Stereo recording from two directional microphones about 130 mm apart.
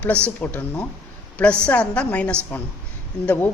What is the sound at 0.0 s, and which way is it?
A woman's voice, 10° left (ahead or behind).